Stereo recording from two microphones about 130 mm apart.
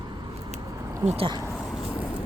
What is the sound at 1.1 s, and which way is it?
Speech, 50° right (ahead or behind).